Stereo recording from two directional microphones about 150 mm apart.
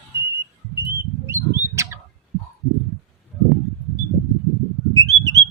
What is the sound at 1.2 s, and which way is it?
Bird, 20° right (ahead or behind).